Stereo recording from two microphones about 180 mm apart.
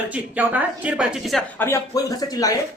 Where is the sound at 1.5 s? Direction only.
15° left (ahead or behind).